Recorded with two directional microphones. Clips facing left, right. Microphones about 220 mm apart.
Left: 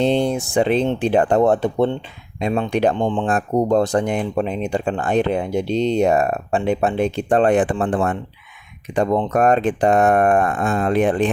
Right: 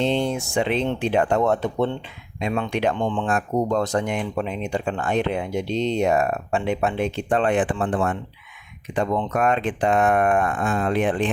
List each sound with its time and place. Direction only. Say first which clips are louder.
0.0 s speech: left 4 dB; 35° left (ahead or behind)